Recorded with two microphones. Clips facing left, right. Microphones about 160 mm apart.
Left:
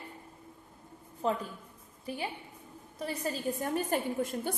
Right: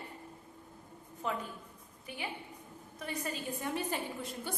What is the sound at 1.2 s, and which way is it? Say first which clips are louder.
A woman's voice: left 6 dB; 35° left (ahead or behind).